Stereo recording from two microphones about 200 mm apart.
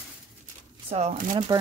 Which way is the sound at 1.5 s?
15° right (ahead or behind).